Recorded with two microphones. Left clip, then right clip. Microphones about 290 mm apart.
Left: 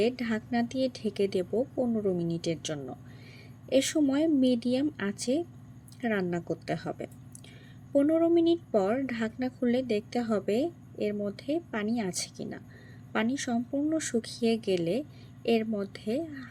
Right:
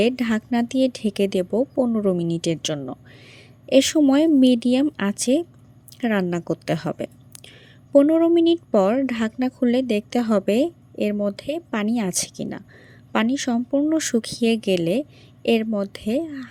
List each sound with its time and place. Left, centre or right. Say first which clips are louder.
0.0 s a woman's voice: right 8 dB; right